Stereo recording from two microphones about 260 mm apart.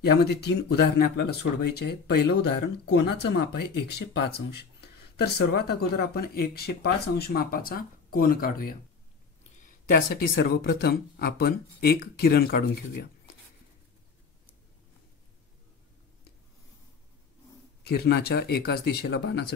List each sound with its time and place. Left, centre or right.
0.0 s speech: left
17.8 s speech: left